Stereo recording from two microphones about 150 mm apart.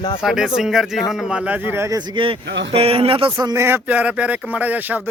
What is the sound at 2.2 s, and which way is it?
Speech, 35° right (ahead or behind).